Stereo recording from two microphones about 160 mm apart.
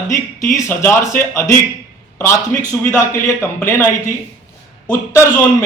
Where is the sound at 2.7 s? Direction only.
20° left (ahead or behind).